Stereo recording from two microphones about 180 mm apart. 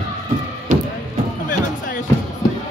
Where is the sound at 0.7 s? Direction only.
50° right (ahead or behind).